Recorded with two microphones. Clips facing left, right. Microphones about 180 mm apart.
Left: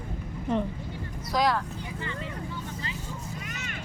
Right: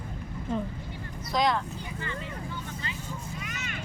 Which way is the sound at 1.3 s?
5° left (ahead or behind).